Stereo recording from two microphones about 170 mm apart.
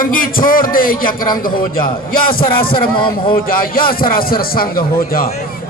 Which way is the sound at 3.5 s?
60° left (ahead or behind).